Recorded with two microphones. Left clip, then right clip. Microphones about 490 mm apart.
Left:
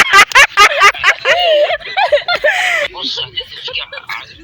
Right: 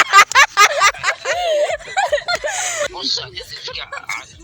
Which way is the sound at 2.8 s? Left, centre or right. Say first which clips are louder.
Left 3 dB; right.